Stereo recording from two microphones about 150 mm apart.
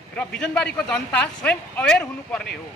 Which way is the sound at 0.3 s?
5° left (ahead or behind).